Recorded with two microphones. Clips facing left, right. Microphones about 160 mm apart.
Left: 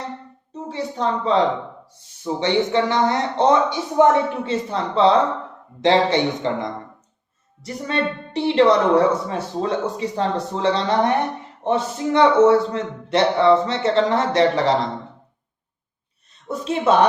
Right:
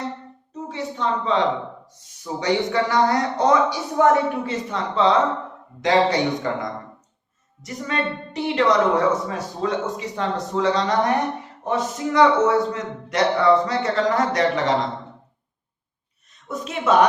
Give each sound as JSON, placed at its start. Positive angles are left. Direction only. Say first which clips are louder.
{"t": 0.5, "sound": "a woman's voice", "louder": "left 2 dB", "side_deg": 35}
{"t": 7.6, "sound": "a woman's voice", "louder": "left 2 dB", "side_deg": 30}
{"t": 16.5, "sound": "a woman's voice", "louder": "left 2 dB", "side_deg": 30}